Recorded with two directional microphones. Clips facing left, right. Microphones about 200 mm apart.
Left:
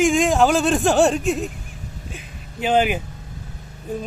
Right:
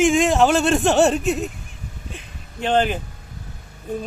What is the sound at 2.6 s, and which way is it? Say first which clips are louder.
Speech: left 1 dB; 10° left (ahead or behind).